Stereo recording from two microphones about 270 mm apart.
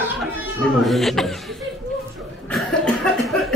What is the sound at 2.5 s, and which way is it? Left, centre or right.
Cough, centre.